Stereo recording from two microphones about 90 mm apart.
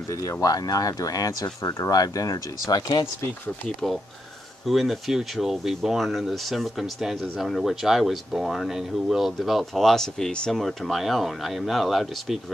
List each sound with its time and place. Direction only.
0.1 s speech: 40° left (ahead or behind)
3.6 s speech: 5° left (ahead or behind)